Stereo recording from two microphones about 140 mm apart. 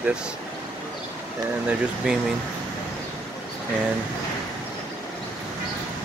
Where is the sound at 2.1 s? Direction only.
5° right (ahead or behind).